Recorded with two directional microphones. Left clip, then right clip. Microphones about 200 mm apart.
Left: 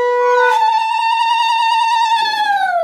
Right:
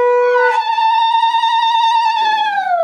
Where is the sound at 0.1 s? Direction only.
25° left (ahead or behind).